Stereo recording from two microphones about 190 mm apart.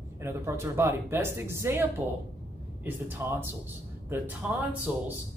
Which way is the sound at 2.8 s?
10° right (ahead or behind).